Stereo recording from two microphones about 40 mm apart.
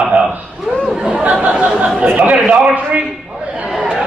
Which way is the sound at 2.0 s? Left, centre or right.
Right.